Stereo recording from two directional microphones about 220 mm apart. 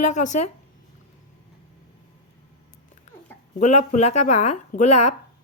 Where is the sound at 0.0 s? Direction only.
35° left (ahead or behind).